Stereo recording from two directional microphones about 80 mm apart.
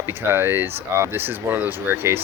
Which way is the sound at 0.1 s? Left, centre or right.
Right.